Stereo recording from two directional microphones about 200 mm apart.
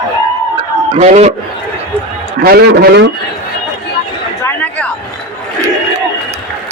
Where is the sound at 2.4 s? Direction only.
50° right (ahead or behind).